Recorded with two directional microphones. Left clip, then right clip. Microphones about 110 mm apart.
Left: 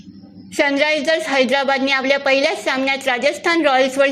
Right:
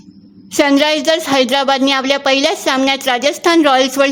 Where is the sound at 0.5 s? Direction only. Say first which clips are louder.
Right 4 dB; 55° right (ahead or behind).